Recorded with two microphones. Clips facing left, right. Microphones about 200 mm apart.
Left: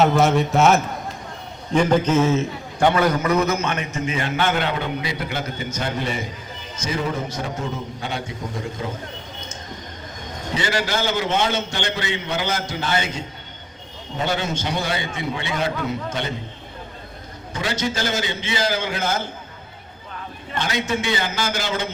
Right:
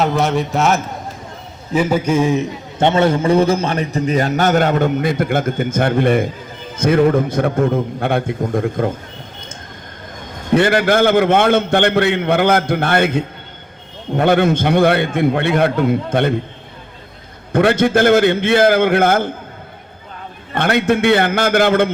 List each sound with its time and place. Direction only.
0.0 s a man's voice: centre (ahead or behind); by 9.0 s 55° right (ahead or behind)
10.5 s a man's voice: 55° right (ahead or behind)
17.5 s a man's voice: 55° right (ahead or behind)
20.5 s a man's voice: 60° right (ahead or behind)